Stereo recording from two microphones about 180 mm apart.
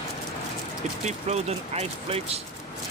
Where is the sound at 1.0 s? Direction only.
35° right (ahead or behind).